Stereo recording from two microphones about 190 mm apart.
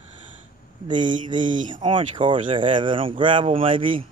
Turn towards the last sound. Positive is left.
turn(degrees=-25)  # may be behind; listen again after turning